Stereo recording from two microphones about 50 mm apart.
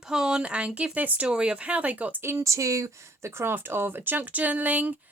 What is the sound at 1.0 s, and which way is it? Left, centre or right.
Speech, right.